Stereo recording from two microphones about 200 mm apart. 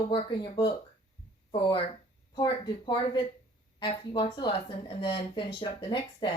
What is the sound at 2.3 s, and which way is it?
A woman's voice, 20° left (ahead or behind).